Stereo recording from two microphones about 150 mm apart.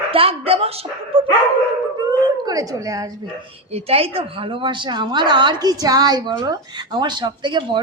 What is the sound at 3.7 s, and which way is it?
A woman's voice, 40° right (ahead or behind).